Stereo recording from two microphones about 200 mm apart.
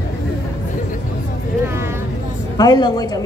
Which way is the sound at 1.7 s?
10° right (ahead or behind).